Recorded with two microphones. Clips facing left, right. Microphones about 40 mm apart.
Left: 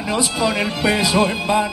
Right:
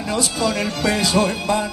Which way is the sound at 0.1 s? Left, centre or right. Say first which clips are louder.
Left 2 dB; centre.